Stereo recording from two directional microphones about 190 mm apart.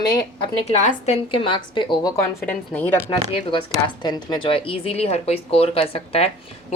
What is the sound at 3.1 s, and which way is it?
Speech, 25° left (ahead or behind).